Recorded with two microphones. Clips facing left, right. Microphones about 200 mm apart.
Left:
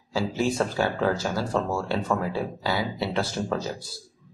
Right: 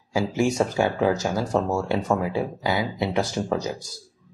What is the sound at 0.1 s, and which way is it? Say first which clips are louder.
Speech: right 3 dB; 15° right (ahead or behind).